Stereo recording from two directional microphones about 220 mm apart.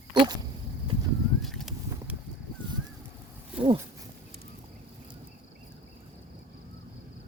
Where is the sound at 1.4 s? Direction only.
Centre (ahead or behind).